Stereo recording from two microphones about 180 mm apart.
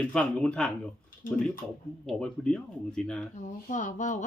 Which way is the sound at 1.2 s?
50° left (ahead or behind).